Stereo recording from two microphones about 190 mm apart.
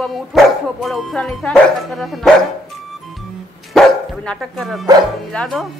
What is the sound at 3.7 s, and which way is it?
Dog, centre (ahead or behind).